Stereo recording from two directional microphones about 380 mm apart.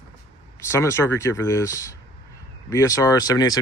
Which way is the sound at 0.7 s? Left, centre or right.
Centre.